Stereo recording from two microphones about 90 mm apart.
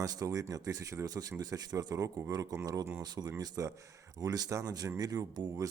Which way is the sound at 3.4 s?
35° right (ahead or behind).